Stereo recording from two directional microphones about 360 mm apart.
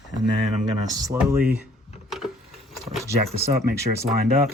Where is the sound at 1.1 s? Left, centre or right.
Centre.